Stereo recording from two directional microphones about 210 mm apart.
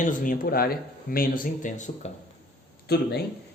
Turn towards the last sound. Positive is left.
turn(degrees=50)  # may be behind; listen again after turning